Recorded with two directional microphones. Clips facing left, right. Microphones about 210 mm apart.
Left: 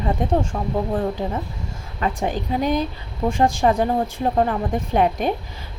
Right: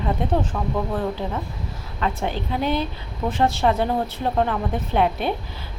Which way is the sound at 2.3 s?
45° left (ahead or behind).